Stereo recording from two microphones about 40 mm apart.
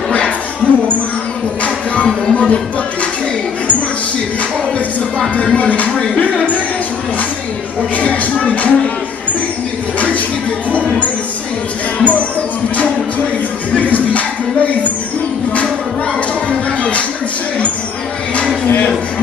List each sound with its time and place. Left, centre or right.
0.6 s music: left
2.0 s music: left
5.3 s speech: left
7.9 s speech: left
9.9 s a sound: left
12.0 s speech: left
13.7 s music: left
16.4 s a sound: left